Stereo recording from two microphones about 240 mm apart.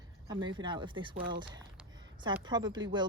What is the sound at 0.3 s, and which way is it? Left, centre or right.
Speech, centre.